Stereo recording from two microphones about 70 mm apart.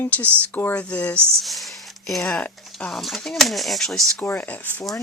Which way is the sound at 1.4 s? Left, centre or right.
Centre.